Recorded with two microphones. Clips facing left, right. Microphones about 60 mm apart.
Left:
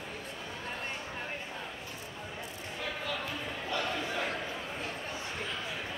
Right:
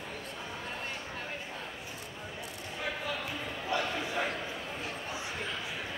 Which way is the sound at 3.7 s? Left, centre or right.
Centre.